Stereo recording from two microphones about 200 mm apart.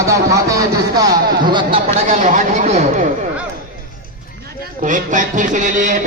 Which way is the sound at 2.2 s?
35° right (ahead or behind).